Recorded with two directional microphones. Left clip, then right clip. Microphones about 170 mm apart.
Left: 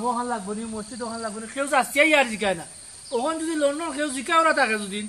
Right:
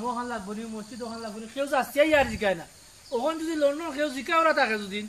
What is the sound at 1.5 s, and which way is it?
Speech, 15° left (ahead or behind).